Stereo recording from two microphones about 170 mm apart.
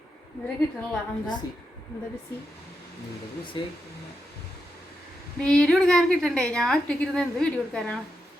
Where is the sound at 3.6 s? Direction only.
30° left (ahead or behind).